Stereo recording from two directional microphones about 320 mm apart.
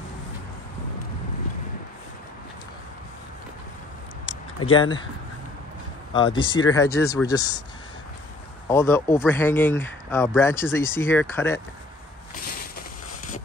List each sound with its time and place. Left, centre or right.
4.7 s speech: centre
6.1 s speech: centre
8.6 s speech: centre